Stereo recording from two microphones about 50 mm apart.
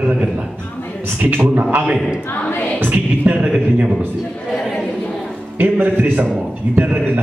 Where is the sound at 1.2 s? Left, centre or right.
Right.